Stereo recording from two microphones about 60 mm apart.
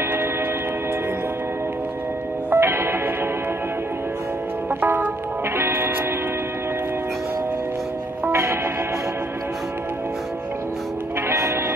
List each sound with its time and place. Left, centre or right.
2.5 s music: right
4.6 s music: right
8.3 s music: right
11.2 s music: right